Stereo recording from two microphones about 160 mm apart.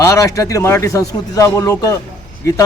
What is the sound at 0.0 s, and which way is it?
A man's voice, 20° left (ahead or behind).